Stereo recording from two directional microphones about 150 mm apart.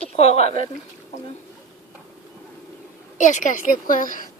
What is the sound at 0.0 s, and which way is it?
Speech, 40° left (ahead or behind).